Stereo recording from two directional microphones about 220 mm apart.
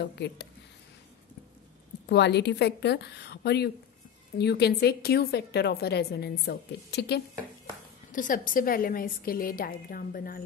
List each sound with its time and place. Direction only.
0.0 s a woman's voice: 50° left (ahead or behind)
2.0 s a woman's voice: 50° left (ahead or behind)
8.1 s a woman's voice: 35° left (ahead or behind)